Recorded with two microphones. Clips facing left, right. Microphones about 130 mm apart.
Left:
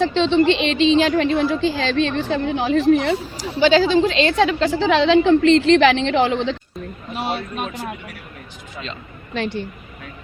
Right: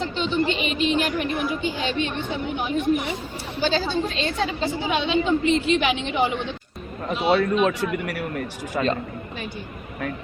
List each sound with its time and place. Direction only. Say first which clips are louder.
0.0 s a woman's voice: left 8 dB; 90° left
7.1 s a man's voice: right 5 dB; 60° right (ahead or behind)
7.6 s speech: right 6 dB; 75° right (ahead or behind)
8.7 s a man's voice: right 10 dB; 50° right (ahead or behind)
9.3 s speech: left 9 dB; 90° left